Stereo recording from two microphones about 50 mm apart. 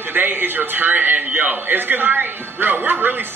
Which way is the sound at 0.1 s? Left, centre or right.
Right.